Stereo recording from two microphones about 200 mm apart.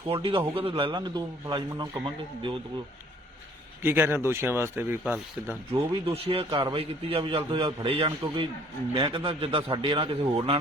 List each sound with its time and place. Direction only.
0.1 s a man's voice: 25° right (ahead or behind)
3.8 s speech: 10° right (ahead or behind)
5.9 s a man's voice: 30° right (ahead or behind)